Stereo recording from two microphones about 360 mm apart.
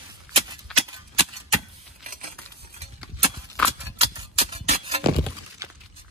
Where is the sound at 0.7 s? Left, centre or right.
Centre.